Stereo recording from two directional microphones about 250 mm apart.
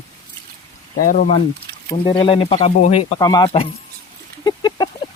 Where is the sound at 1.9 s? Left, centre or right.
Centre.